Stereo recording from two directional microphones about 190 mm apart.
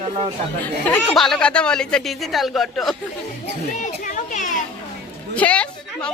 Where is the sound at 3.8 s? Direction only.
40° left (ahead or behind).